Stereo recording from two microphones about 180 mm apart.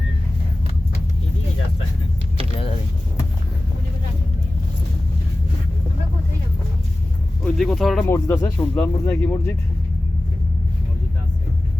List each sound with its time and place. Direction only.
7.4 s speech: centre (ahead or behind)